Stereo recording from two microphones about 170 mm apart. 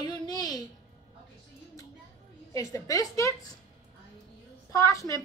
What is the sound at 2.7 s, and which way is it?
Speech, 20° left (ahead or behind).